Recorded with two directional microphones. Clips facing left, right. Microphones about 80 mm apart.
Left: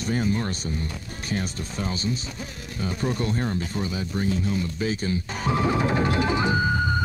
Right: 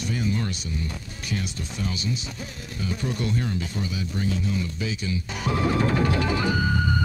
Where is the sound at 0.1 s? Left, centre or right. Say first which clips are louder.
Left 3 dB; left.